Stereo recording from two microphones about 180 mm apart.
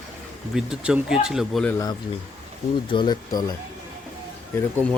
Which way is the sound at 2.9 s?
25° left (ahead or behind).